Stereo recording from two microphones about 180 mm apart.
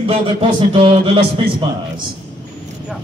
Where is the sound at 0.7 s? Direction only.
30° right (ahead or behind).